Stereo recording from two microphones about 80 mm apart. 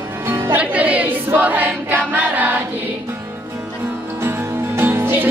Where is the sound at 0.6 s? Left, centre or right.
Centre.